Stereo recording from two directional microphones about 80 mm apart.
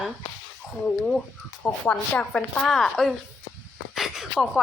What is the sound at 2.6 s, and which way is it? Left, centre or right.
Speech, centre.